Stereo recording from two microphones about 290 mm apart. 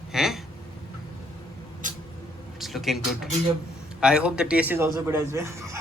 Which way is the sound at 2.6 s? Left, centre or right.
Centre.